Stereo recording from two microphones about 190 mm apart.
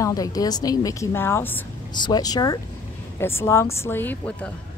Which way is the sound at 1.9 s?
20° left (ahead or behind).